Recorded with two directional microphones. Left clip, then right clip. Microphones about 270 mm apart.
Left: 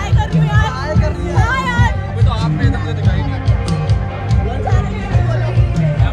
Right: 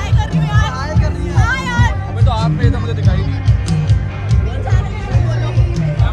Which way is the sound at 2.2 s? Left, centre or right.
Right.